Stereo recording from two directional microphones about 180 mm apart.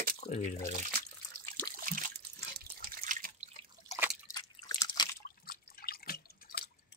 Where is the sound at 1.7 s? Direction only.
50° right (ahead or behind).